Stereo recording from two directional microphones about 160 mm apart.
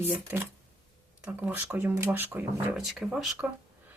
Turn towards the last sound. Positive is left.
turn(degrees=0)  # may be behind; listen again after turning